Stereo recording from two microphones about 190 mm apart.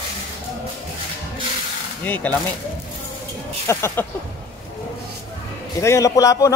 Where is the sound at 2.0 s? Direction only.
10° left (ahead or behind).